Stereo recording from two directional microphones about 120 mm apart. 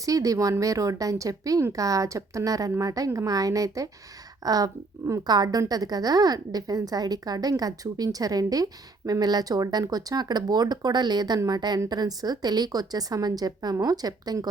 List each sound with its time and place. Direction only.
0.0 s a woman's voice: 30° right (ahead or behind)